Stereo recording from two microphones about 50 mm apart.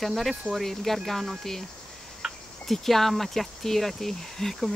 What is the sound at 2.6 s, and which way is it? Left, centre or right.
Speech, centre.